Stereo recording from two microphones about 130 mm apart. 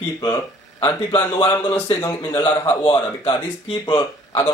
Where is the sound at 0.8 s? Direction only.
30° left (ahead or behind).